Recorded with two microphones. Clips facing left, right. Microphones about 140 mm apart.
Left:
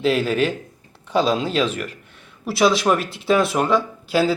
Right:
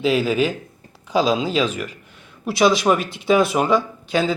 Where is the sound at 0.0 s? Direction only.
Centre (ahead or behind).